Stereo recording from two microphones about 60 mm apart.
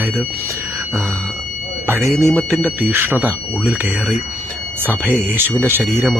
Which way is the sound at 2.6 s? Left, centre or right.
Right.